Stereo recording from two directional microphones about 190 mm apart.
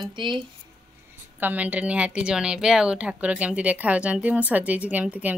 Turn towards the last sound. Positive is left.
turn(degrees=-10)  # may be behind; listen again after turning